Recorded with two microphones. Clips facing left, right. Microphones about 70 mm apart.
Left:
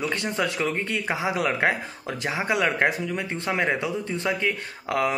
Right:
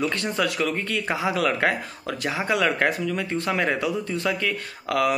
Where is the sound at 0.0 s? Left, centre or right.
Left.